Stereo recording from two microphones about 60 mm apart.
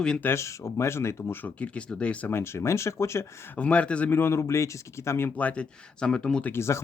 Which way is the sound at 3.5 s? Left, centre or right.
Left.